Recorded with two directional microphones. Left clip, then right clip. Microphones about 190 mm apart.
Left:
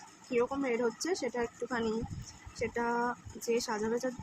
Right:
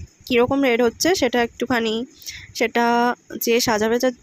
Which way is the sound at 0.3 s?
50° right (ahead or behind).